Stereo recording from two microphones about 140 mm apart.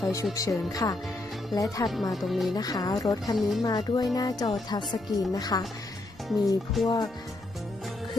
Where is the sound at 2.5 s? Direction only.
25° left (ahead or behind).